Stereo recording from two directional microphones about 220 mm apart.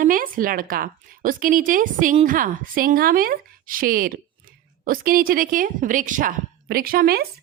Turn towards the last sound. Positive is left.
turn(degrees=-45)  # may be behind; listen again after turning